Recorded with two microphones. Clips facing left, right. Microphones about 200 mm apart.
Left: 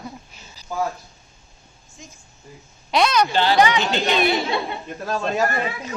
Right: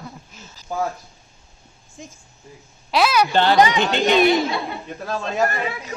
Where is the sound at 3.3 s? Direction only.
55° right (ahead or behind).